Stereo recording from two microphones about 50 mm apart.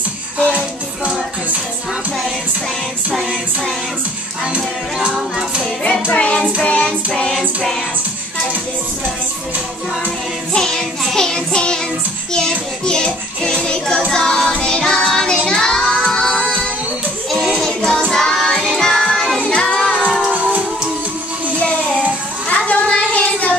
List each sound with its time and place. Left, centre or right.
0.5 s music: right
4.6 s music: centre
6.1 s music: left
6.6 s child singing: left
7.3 s music: centre
10.5 s music: centre
11.1 s child singing: centre
12.3 s music: centre
15.0 s child singing: centre
15.4 s music: centre
17.6 s music: centre
19.4 s child singing: centre
22.5 s a sound: left